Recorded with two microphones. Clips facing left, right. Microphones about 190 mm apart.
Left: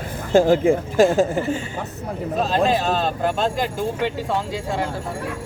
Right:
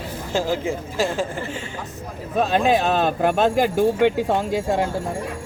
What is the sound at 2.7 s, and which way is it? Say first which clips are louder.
Speech: right 2 dB; 60° right (ahead or behind).